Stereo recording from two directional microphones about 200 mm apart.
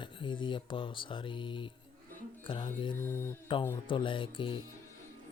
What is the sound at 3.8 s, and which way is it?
Speech, 25° left (ahead or behind).